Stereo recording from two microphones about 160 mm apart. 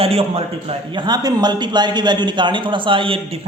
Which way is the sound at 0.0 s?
40° right (ahead or behind).